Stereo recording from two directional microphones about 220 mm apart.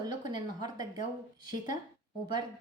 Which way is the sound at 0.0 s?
20° right (ahead or behind).